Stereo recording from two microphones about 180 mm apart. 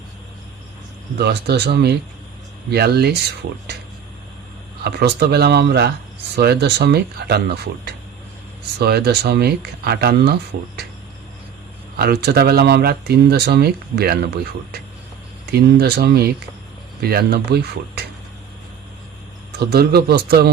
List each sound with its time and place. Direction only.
1.2 s speech: 65° right (ahead or behind)
4.8 s speech: 65° right (ahead or behind)
11.9 s speech: 60° right (ahead or behind)
15.4 s speech: 65° right (ahead or behind)
19.5 s speech: 60° right (ahead or behind)